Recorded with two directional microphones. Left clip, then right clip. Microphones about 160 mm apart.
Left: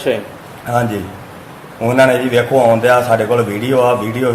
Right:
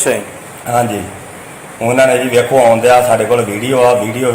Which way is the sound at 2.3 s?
Centre (ahead or behind).